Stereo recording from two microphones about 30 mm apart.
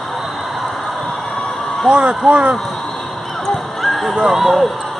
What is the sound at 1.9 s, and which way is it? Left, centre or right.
Speech, right.